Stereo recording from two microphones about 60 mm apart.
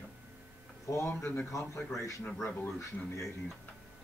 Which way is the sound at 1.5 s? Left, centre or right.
Left.